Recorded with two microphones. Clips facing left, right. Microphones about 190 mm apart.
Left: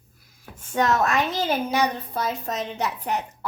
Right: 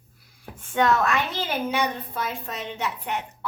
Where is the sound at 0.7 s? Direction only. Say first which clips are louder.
Even; 40° left (ahead or behind).